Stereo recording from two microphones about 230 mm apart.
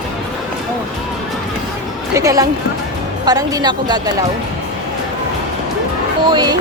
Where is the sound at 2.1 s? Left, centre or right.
Centre.